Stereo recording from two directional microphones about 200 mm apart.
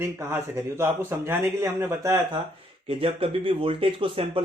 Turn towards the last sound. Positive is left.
turn(degrees=-25)  # may be behind; listen again after turning